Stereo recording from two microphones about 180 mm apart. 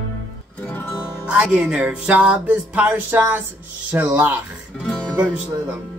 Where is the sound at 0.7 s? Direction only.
10° left (ahead or behind).